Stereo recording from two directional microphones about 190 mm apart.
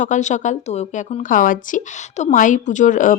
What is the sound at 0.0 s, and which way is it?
A woman's voice, 40° left (ahead or behind).